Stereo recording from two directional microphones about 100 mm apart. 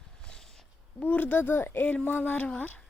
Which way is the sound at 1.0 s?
15° left (ahead or behind).